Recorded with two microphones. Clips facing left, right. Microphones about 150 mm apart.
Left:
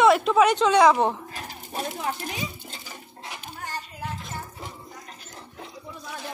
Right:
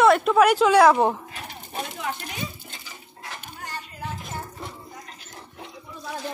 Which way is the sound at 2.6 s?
35° left (ahead or behind).